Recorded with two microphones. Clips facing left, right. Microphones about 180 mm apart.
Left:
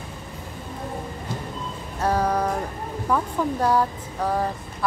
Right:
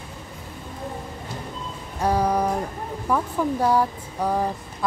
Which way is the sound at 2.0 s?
10° right (ahead or behind).